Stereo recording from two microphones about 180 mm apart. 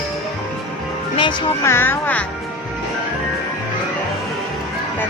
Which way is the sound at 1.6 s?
15° left (ahead or behind).